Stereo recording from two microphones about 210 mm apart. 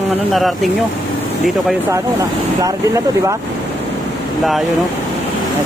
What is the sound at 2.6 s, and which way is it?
Speech, 15° right (ahead or behind).